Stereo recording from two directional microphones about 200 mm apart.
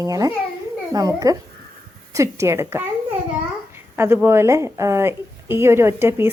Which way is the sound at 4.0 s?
10° right (ahead or behind).